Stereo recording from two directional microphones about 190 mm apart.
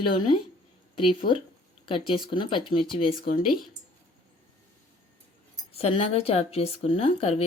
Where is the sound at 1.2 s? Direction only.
55° left (ahead or behind).